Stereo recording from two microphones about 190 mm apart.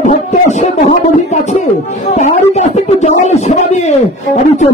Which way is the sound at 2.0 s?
35° left (ahead or behind).